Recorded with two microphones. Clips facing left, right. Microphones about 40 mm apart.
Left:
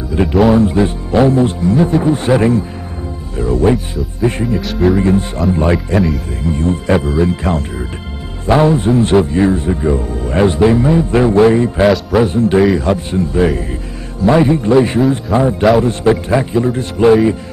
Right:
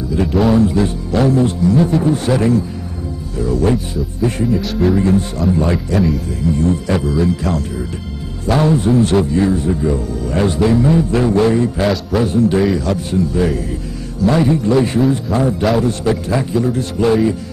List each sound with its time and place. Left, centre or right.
0.1 s music: left
0.6 s a man's voice: left
1.8 s a man's voice: left
3.6 s a man's voice: left
4.5 s speech: centre
4.9 s a man's voice: left
5.9 s speech: centre
6.5 s a man's voice: left
15.8 s a man's voice: left